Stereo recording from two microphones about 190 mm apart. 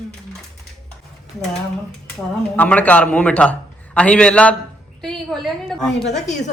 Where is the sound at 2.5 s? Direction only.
10° left (ahead or behind).